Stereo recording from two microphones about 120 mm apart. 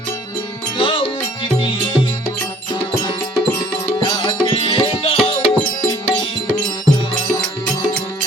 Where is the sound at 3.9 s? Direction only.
40° left (ahead or behind); by 5.4 s 55° left (ahead or behind).